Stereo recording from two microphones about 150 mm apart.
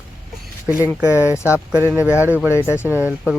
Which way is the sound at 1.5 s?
10° right (ahead or behind).